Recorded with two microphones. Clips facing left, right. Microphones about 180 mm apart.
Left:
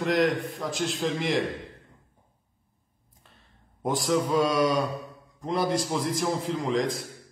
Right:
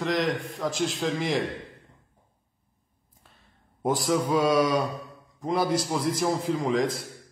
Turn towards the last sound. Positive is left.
turn(degrees=-50)  # may be behind; listen again after turning